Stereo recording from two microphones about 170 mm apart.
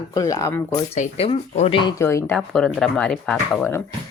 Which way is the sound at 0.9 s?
40° left (ahead or behind).